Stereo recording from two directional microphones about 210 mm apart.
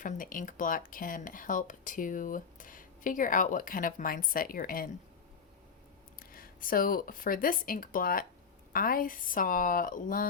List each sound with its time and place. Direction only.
0.0 s speech: 40° left (ahead or behind)
6.1 s speech: 45° left (ahead or behind)